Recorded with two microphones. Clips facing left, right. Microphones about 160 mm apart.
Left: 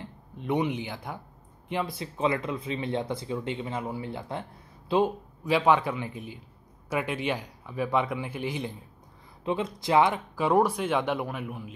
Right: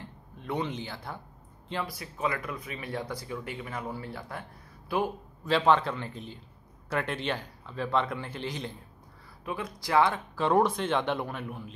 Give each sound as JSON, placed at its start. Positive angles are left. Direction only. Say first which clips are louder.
{"t": 0.0, "sound": "speech", "louder": "left 5 dB", "side_deg": 20}
{"t": 5.5, "sound": "speech", "louder": "left 1 dB", "side_deg": 10}
{"t": 9.4, "sound": "speech", "louder": "left 6 dB", "side_deg": 25}